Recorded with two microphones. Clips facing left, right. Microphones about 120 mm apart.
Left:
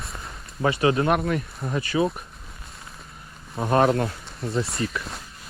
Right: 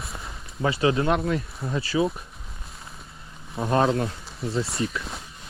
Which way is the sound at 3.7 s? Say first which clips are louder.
Left 2 dB; 55° left (ahead or behind).